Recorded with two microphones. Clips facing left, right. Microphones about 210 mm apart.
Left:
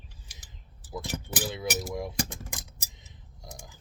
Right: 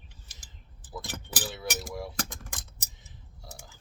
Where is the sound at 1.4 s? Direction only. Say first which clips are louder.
Left 4 dB; 20° left (ahead or behind).